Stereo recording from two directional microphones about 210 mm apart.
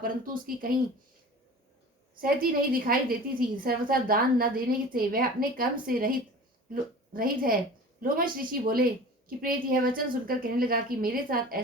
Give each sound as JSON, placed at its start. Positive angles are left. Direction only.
{"t": 0.0, "sound": "a woman's voice", "side_deg": -45}
{"t": 2.2, "sound": "a woman's voice", "side_deg": -45}